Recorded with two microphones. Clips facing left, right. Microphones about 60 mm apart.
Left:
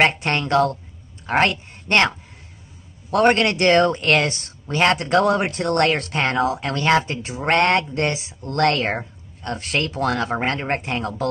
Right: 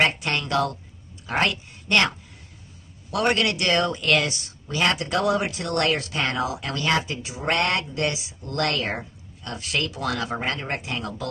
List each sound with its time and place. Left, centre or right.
0.0 s a woman's voice: left